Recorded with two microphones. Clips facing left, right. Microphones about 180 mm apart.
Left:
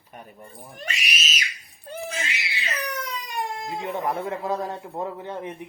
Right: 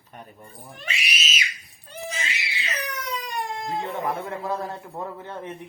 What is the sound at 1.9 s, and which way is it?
Crying, 50° left (ahead or behind).